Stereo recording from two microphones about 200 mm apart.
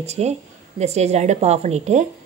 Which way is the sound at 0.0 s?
35° right (ahead or behind).